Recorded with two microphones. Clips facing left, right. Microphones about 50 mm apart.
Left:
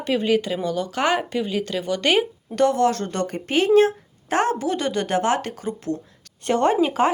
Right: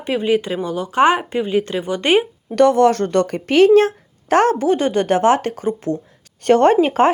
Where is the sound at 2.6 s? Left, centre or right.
Right.